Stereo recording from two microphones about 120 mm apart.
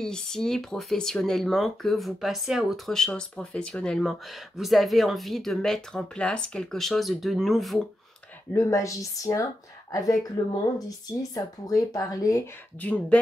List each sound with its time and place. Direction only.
0.0 s speech: 5° left (ahead or behind)
8.5 s speech: 25° left (ahead or behind)
12.8 s speech: 10° left (ahead or behind)